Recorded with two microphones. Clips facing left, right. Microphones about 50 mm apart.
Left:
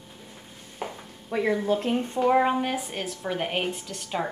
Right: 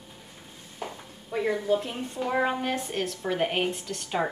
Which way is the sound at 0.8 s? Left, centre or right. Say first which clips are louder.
Left 2 dB; centre.